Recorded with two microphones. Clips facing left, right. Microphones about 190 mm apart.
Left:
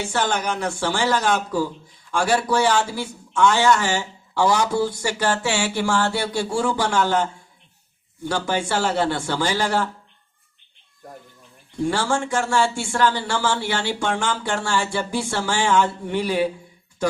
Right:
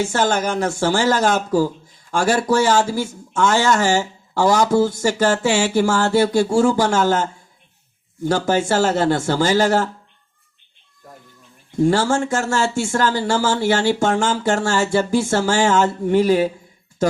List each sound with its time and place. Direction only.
0.0 s speech: 45° right (ahead or behind)
11.8 s speech: 40° right (ahead or behind)